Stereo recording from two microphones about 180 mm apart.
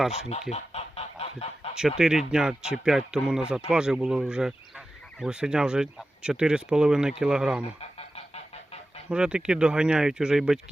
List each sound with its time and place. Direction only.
0.1 s speech: 35° left (ahead or behind)
0.5 s goose: 35° left (ahead or behind)
2.0 s speech: 5° right (ahead or behind)
7.8 s goose: 35° left (ahead or behind)
9.0 s speech: 5° right (ahead or behind)